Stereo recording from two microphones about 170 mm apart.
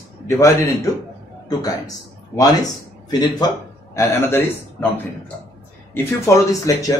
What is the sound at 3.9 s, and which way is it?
Speech, 15° left (ahead or behind).